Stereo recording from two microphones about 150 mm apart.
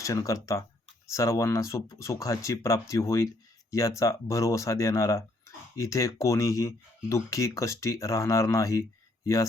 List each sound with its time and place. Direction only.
0.0 s speech: 20° left (ahead or behind)